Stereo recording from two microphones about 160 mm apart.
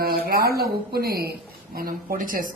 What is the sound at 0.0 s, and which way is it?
A woman's voice, 70° right (ahead or behind).